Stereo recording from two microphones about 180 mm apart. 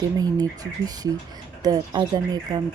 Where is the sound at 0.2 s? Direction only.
20° right (ahead or behind).